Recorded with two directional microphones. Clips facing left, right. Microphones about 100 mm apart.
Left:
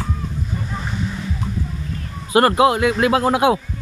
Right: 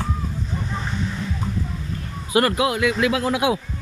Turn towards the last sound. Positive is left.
turn(degrees=45)  # may be behind; listen again after turning